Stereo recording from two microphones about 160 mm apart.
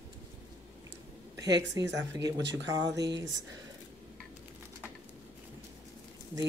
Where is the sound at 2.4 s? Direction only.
90° right.